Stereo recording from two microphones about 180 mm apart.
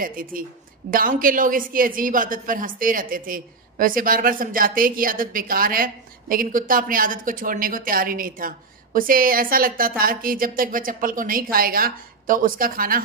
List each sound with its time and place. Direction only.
0.0 s a woman's voice: 50° right (ahead or behind)